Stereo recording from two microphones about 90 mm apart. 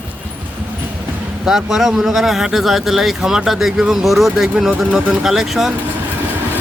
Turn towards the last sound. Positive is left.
turn(degrees=-5)  # may be behind; listen again after turning